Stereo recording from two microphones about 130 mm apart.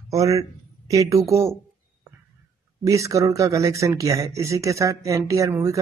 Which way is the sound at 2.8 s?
25° right (ahead or behind).